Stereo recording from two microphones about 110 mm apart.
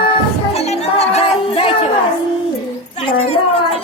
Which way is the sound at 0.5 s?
70° left (ahead or behind).